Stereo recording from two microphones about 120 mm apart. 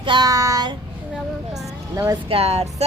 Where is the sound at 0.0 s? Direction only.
40° right (ahead or behind).